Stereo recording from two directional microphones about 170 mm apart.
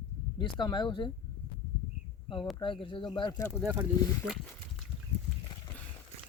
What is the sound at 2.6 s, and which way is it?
Speech, 30° left (ahead or behind).